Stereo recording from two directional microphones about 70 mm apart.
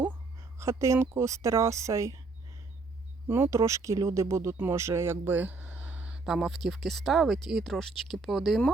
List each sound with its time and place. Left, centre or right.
0.6 s a woman's voice: right
3.2 s a woman's voice: right
6.1 s speech: centre